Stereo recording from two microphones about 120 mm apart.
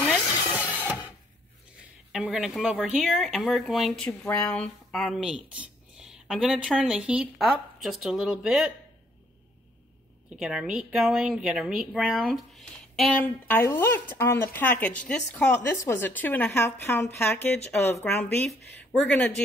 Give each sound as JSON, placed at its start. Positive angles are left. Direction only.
{"t": 0.1, "sound": "a sound", "side_deg": -10}
{"t": 2.1, "sound": "speech", "side_deg": -5}
{"t": 10.3, "sound": "speech", "side_deg": -5}
{"t": 13.2, "sound": "speech", "side_deg": 15}